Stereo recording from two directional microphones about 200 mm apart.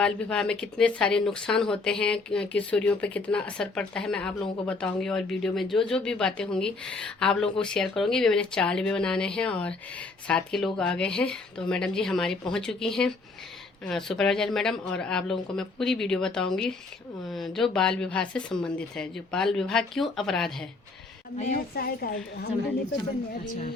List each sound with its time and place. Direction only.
0.0 s speech: 5° left (ahead or behind)
21.8 s a woman's voice: 50° left (ahead or behind)
23.5 s speech: 30° left (ahead or behind)